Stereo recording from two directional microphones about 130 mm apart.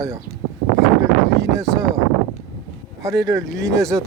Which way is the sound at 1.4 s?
25° right (ahead or behind).